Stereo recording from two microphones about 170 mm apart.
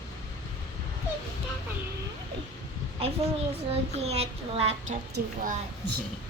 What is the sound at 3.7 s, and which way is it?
Speech, 35° right (ahead or behind).